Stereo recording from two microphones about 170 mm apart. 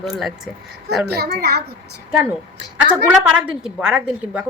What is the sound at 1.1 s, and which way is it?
Speech, 70° right (ahead or behind).